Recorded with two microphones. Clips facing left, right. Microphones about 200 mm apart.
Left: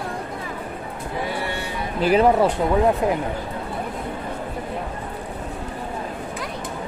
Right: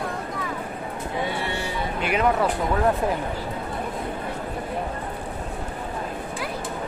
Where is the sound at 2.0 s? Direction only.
35° left (ahead or behind).